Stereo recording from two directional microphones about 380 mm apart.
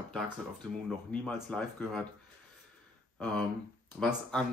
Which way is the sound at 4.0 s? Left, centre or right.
Centre.